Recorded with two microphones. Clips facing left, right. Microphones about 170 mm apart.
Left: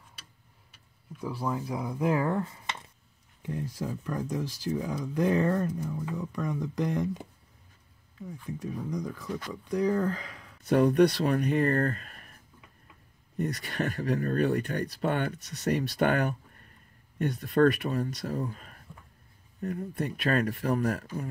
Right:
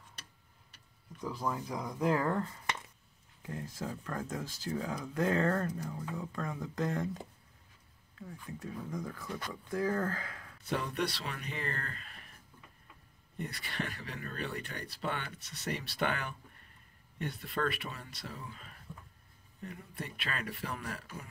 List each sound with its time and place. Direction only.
1.1 s speech: 10° left (ahead or behind)
8.3 s speech: 15° left (ahead or behind)
10.7 s speech: 45° left (ahead or behind)
13.4 s speech: 45° left (ahead or behind)